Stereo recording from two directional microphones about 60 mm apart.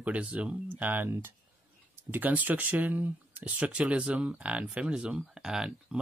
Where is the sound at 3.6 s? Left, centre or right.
Right.